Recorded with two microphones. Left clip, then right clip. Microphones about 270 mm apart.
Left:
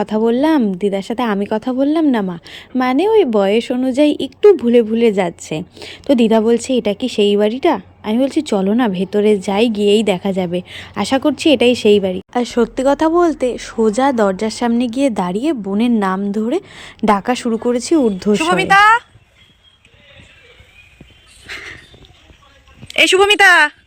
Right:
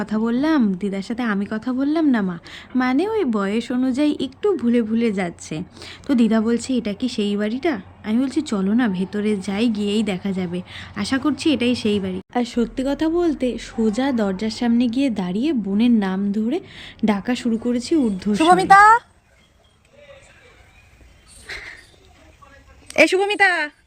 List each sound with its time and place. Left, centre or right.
0.0 s a woman's voice: centre
18.3 s speech: centre
21.4 s dog: centre
23.0 s a woman's voice: centre